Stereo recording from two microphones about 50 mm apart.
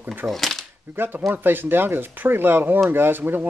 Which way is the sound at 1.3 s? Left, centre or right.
Right.